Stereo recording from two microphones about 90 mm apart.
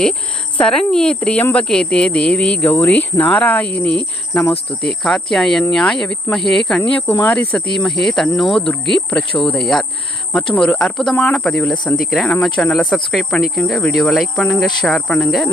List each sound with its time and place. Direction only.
0.0 s speech: 10° left (ahead or behind)
7.1 s speech: 20° left (ahead or behind)
7.7 s speech: 5° left (ahead or behind)
11.9 s speech: 5° left (ahead or behind)